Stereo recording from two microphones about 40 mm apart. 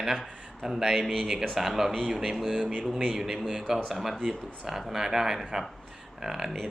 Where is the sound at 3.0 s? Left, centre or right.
Centre.